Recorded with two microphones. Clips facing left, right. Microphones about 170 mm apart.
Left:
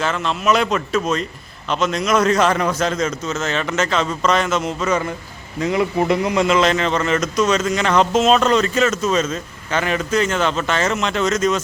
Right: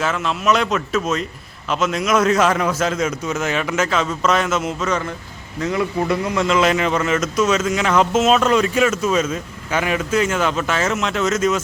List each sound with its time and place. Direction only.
0.0 s speech: 5° right (ahead or behind)
5.6 s a man's voice: 15° left (ahead or behind)
6.5 s speech: 5° right (ahead or behind)